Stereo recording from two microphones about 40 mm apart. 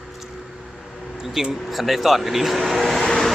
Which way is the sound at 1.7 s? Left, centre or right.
Centre.